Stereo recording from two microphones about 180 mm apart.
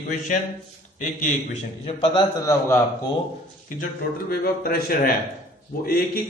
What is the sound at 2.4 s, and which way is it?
Speech, 15° left (ahead or behind).